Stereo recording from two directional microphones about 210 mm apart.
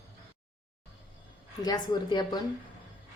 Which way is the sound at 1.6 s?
20° left (ahead or behind).